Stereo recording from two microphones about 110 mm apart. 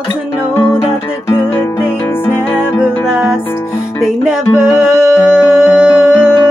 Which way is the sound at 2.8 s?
10° right (ahead or behind).